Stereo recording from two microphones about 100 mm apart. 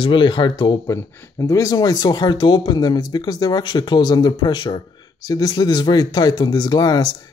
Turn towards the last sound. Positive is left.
turn(degrees=45)  # may be behind; listen again after turning